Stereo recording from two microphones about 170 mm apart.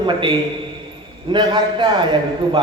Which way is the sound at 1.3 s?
25° right (ahead or behind).